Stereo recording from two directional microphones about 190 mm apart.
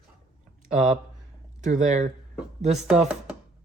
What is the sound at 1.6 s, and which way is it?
Speech, 40° right (ahead or behind).